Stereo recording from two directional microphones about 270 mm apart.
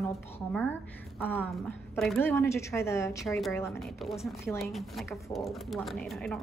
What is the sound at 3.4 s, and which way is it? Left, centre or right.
Speech, centre.